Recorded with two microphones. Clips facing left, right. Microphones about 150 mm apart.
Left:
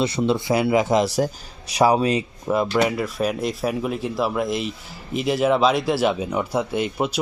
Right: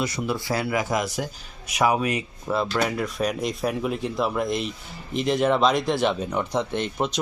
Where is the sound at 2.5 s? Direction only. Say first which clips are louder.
Left 4 dB; 15° left (ahead or behind).